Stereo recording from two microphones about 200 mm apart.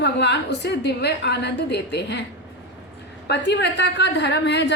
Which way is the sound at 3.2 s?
60° left (ahead or behind).